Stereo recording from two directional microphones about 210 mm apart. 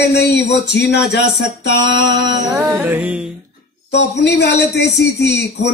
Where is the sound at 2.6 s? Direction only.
10° right (ahead or behind).